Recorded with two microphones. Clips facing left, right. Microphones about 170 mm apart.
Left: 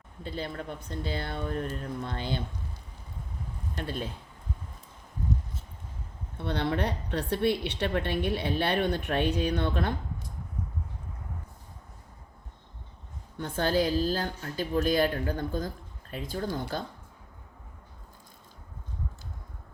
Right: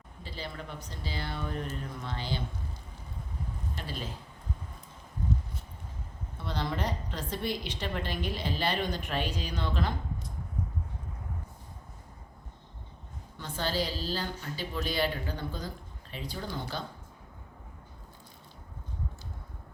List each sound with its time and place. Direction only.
0.2 s a woman's voice: 50° left (ahead or behind)
3.8 s a woman's voice: 60° left (ahead or behind)
6.3 s a woman's voice: 60° left (ahead or behind)
13.4 s a woman's voice: 55° left (ahead or behind)